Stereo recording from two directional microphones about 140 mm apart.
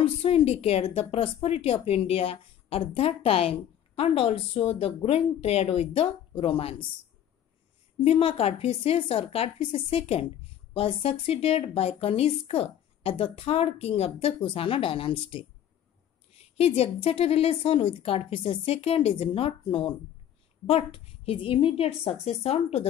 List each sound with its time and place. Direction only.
0.0 s a woman's voice: 45° left (ahead or behind)
8.0 s a woman's voice: 45° left (ahead or behind)